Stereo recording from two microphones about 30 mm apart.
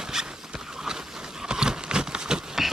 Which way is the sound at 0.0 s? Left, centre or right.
Centre.